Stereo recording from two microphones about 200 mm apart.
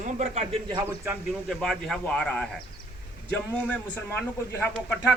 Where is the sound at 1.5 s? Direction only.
Centre (ahead or behind).